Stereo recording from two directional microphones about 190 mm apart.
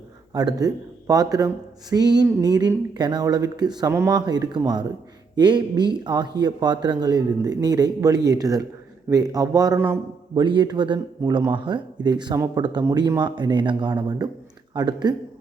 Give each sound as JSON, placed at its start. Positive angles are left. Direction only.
{"t": 0.3, "sound": "speech", "side_deg": -20}